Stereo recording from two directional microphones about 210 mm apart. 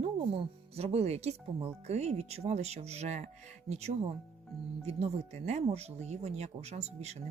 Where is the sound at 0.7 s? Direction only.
30° right (ahead or behind).